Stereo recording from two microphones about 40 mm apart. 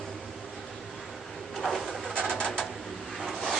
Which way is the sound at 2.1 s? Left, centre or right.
Left.